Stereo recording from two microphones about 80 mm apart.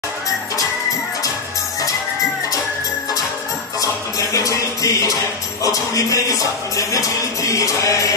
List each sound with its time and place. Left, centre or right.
3.8 s music: left